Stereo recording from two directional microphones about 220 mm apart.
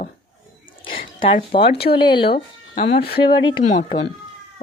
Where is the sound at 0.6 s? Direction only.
25° left (ahead or behind).